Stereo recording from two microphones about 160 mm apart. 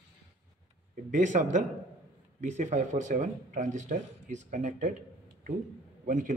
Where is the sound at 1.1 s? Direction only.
50° right (ahead or behind).